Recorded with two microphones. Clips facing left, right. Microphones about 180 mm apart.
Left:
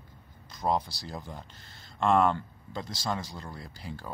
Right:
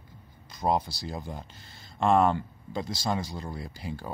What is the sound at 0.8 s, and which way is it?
Speech, 15° right (ahead or behind).